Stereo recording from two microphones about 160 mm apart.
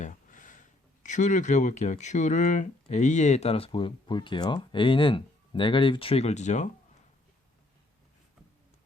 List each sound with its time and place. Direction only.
0.0 s speech: 55° left (ahead or behind)